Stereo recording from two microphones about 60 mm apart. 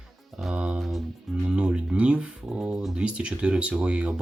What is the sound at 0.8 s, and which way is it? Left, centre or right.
Music, centre.